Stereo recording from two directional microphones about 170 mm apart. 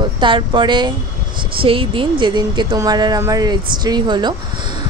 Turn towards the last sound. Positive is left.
turn(degrees=-25)  # may be behind; listen again after turning